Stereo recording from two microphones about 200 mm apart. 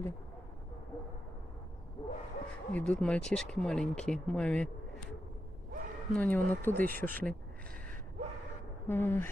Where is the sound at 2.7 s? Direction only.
5° left (ahead or behind).